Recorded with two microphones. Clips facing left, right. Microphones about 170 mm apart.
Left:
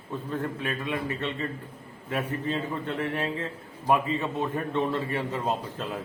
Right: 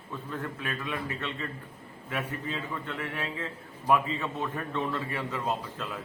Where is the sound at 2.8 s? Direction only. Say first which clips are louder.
Left 6 dB; 30° left (ahead or behind).